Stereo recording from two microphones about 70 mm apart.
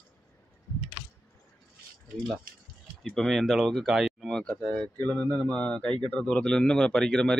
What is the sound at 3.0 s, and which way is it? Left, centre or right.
Speech, centre.